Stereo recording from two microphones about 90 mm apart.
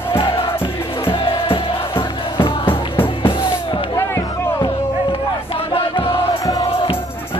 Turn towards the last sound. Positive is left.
turn(degrees=85)